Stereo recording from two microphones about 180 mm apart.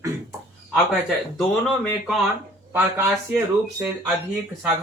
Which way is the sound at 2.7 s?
10° right (ahead or behind).